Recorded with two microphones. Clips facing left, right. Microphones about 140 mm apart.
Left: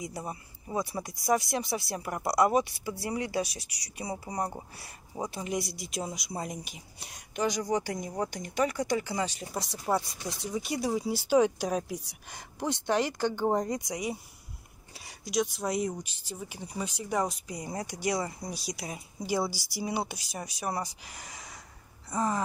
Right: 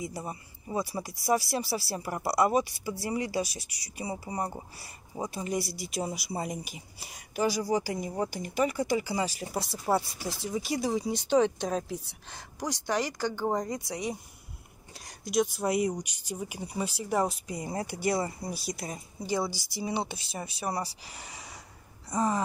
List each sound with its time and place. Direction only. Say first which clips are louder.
0.0 s speech: right 1 dB; centre (ahead or behind); by 14.1 s 15° left (ahead or behind)
15.0 s speech: right 2 dB; centre (ahead or behind)
19.5 s speech: even; 20° right (ahead or behind)
19.8 s speech: even; 5° left (ahead or behind)
21.1 s speech: right 1 dB; 30° right (ahead or behind)
22.1 s speech: right 2 dB; 10° right (ahead or behind)